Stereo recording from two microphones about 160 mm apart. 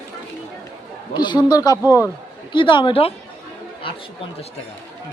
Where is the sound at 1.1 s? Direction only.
25° left (ahead or behind).